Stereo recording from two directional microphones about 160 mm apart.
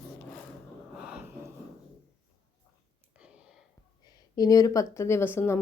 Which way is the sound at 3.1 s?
5° right (ahead or behind).